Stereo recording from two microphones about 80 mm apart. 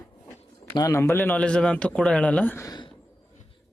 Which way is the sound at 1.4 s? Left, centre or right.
Centre.